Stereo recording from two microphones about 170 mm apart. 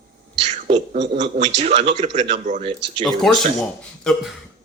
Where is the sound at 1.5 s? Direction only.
40° right (ahead or behind).